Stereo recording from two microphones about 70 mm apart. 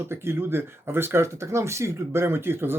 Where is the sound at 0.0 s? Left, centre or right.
Right.